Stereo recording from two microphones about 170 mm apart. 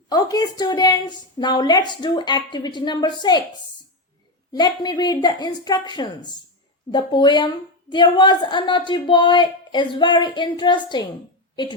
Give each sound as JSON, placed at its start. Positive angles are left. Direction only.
{"t": 0.1, "sound": "a woman's voice", "side_deg": 20}
{"t": 4.5, "sound": "a woman's voice", "side_deg": 25}